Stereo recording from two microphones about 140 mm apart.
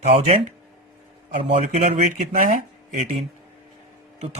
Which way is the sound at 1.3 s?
55° right (ahead or behind).